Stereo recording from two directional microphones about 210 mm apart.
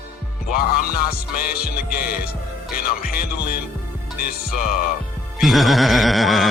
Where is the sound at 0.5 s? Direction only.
45° left (ahead or behind).